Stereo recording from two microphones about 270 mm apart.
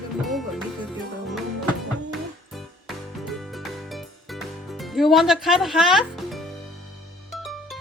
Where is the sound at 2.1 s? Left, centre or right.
Centre.